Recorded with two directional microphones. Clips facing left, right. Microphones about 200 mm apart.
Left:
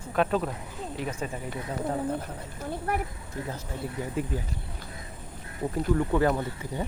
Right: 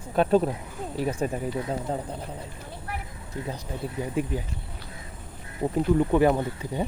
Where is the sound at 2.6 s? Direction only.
45° left (ahead or behind).